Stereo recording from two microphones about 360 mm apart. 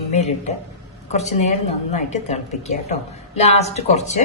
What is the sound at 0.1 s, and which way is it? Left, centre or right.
A woman's voice, centre.